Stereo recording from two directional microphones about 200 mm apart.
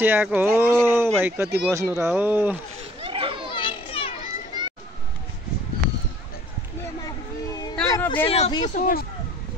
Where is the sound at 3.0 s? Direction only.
25° right (ahead or behind).